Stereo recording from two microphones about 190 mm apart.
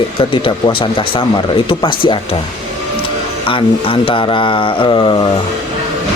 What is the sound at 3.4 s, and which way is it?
Speech, 30° left (ahead or behind).